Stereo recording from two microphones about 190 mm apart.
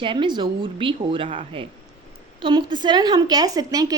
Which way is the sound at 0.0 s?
25° right (ahead or behind).